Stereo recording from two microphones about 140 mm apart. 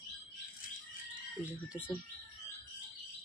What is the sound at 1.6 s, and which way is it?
Speech, 10° right (ahead or behind).